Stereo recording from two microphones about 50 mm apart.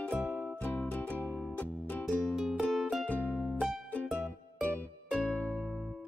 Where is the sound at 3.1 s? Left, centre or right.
Left.